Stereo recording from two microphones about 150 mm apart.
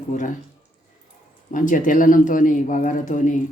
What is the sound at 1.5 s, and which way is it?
Speech, 60° left (ahead or behind).